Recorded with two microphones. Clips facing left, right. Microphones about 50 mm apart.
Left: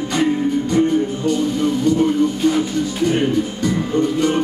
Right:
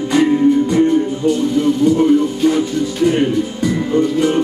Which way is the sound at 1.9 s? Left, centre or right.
Centre.